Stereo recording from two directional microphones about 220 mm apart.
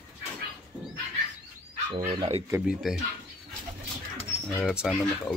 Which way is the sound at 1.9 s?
20° right (ahead or behind).